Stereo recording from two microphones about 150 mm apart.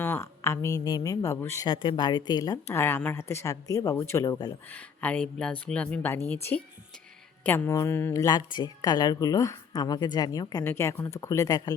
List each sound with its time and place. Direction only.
0.0 s a woman's voice: 15° left (ahead or behind)
1.6 s a woman's voice: 30° left (ahead or behind)
4.7 s a woman's voice: 10° left (ahead or behind); by 11.7 s 25° left (ahead or behind)